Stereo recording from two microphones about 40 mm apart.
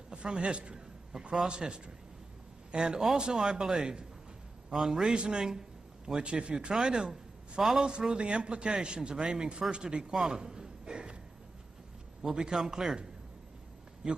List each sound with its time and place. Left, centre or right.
0.1 s a man's voice: right
1.1 s a man's voice: centre
2.7 s a man's voice: right
5.1 s a man's voice: right
12.2 s speech: centre
14.0 s speech: centre